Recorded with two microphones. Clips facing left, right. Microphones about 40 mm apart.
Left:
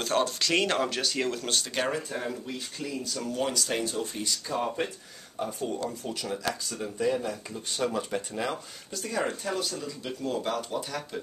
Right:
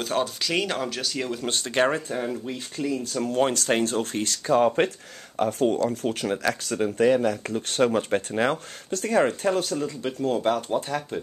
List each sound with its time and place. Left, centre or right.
0.0 s speech: centre
1.5 s speech: right
3.3 s speech: right
5.9 s speech: right
7.9 s speech: right